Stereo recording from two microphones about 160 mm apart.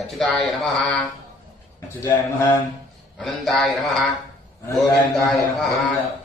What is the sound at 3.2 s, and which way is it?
Mantra, centre (ahead or behind).